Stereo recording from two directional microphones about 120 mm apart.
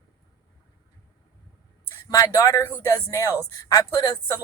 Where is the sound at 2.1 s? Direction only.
25° left (ahead or behind).